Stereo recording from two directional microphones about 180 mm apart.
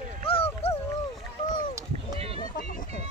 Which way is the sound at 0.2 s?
30° left (ahead or behind).